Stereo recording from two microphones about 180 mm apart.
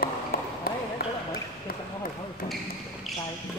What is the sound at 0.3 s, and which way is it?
Basketball bounce, 55° left (ahead or behind).